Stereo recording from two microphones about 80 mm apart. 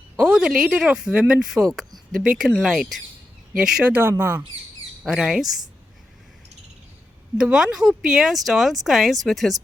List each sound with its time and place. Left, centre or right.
0.2 s speech: centre
3.8 s speech: right
5.0 s speech: centre
7.5 s speech: centre